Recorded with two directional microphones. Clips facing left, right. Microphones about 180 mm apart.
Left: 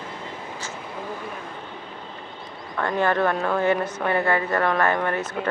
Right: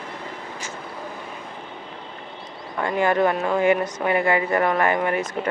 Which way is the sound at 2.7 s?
10° right (ahead or behind).